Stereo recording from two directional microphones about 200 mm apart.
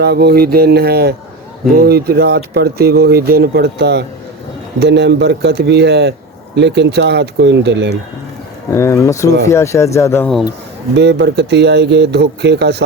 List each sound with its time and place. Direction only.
0.0 s speech: 55° right (ahead or behind)
8.7 s speech: 15° left (ahead or behind)
10.9 s speech: 60° right (ahead or behind)